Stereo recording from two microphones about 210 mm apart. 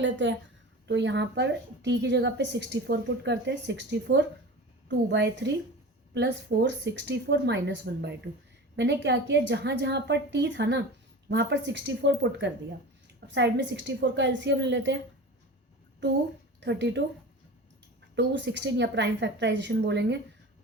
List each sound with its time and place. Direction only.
0.0 s speech: 60° right (ahead or behind)
16.6 s a woman's voice: 55° right (ahead or behind)
18.1 s speech: 60° right (ahead or behind)